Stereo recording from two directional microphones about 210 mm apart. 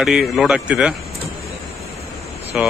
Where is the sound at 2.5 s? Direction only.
5° right (ahead or behind).